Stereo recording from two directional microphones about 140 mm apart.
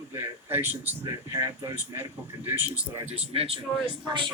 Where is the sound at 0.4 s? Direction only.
15° right (ahead or behind).